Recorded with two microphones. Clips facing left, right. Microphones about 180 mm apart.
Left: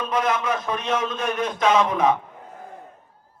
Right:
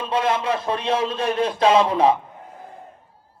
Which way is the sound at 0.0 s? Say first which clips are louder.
Right 1 dB; 30° right (ahead or behind).